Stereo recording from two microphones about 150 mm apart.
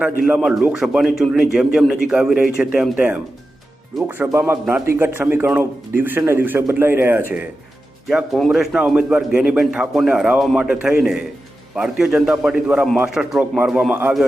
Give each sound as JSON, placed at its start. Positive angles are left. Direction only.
{"t": 0.3, "sound": "a man's voice", "side_deg": -5}
{"t": 8.0, "sound": "a man's voice", "side_deg": 0}